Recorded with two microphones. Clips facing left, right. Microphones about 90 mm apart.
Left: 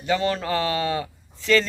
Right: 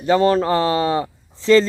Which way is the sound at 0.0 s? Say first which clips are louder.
Right 8 dB; 40° right (ahead or behind).